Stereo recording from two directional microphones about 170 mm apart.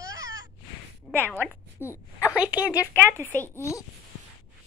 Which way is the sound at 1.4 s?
15° left (ahead or behind).